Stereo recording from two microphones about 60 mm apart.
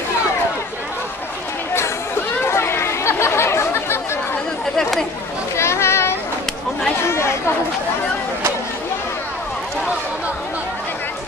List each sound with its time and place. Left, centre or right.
2.4 s chatter: left
5.6 s children playing: left
7.1 s chatter: left